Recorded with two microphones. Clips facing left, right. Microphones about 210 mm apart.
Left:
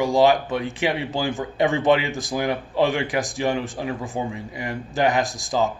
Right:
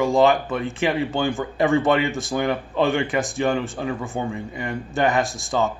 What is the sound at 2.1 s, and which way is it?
Speech, 25° right (ahead or behind).